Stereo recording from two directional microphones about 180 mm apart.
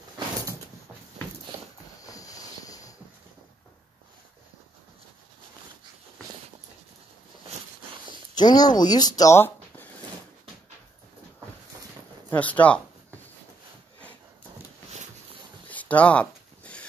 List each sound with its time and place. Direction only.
2.0 s train: 20° left (ahead or behind)
8.4 s speech: 25° left (ahead or behind)
12.3 s speech: 10° left (ahead or behind)
15.7 s a sound: 10° left (ahead or behind)